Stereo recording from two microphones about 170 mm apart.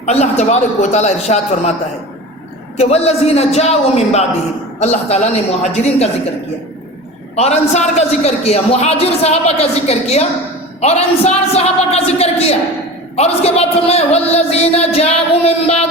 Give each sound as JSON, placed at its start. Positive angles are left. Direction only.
{"t": 0.0, "sound": "a man's voice", "side_deg": 40}
{"t": 2.7, "sound": "a man's voice", "side_deg": 40}
{"t": 7.3, "sound": "a man's voice", "side_deg": 40}